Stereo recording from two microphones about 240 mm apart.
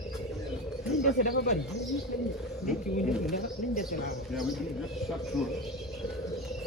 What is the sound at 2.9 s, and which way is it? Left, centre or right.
Speech, left.